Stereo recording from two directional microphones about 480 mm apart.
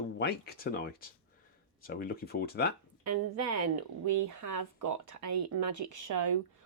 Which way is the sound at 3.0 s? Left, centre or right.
Right.